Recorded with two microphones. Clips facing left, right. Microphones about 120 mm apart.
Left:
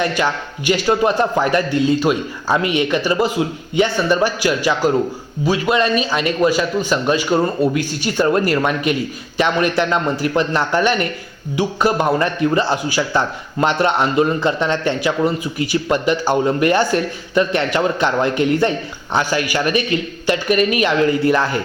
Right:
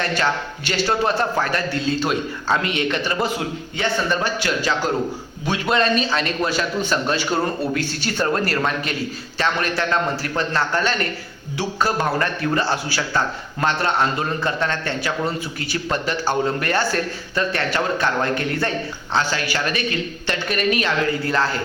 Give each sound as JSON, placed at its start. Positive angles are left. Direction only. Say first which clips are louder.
{"t": 0.0, "sound": "a man's voice", "louder": "left 3 dB", "side_deg": 10}